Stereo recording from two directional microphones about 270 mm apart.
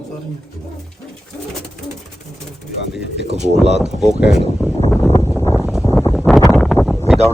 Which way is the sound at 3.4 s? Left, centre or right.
Right.